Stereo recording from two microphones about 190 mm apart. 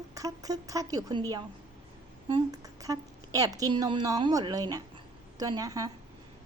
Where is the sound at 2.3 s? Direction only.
20° right (ahead or behind).